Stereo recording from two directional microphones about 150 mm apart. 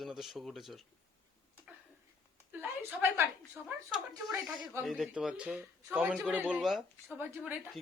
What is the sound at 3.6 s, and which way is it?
A woman's voice, 5° right (ahead or behind).